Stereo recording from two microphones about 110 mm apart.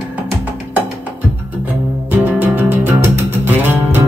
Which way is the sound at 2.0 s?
15° right (ahead or behind).